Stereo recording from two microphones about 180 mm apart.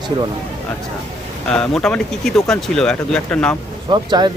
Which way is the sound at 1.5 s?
5° left (ahead or behind).